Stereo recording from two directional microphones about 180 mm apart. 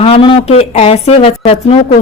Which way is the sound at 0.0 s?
30° left (ahead or behind).